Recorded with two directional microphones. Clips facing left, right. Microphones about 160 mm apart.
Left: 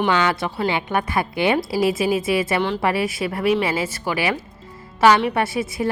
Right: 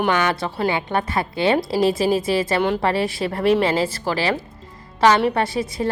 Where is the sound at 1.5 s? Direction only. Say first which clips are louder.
Right 1 dB; 5° left (ahead or behind).